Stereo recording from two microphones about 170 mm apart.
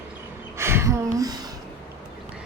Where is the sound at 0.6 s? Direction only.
15° right (ahead or behind).